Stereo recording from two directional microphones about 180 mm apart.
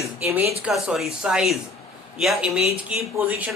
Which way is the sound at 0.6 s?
Centre (ahead or behind).